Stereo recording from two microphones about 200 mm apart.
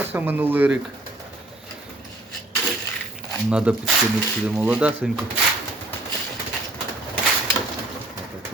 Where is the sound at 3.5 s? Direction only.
5° right (ahead or behind).